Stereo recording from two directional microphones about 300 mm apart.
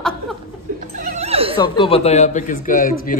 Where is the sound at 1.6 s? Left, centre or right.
Centre.